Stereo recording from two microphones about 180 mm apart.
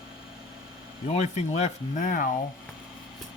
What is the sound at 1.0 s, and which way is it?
Speech, 40° left (ahead or behind).